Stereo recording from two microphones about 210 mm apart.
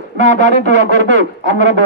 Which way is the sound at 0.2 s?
35° left (ahead or behind).